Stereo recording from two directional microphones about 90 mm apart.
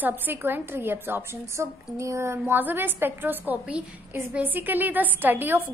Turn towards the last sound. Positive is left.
turn(degrees=-20)  # may be behind; listen again after turning